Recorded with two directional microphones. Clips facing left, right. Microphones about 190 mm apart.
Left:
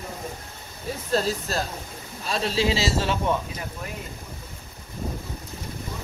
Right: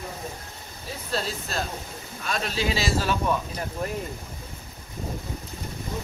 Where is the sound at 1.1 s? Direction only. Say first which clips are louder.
Left 5 dB; 40° left (ahead or behind).